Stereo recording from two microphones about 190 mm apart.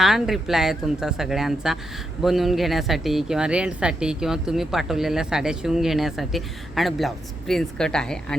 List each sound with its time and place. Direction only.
0.0 s speech: centre (ahead or behind)